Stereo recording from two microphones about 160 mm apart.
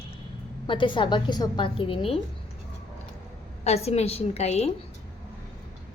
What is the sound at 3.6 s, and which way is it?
A woman's voice, 40° left (ahead or behind).